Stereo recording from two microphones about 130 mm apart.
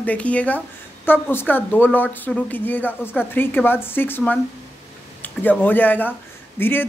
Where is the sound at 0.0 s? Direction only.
10° left (ahead or behind).